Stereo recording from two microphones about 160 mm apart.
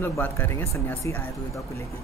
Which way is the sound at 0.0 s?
15° left (ahead or behind).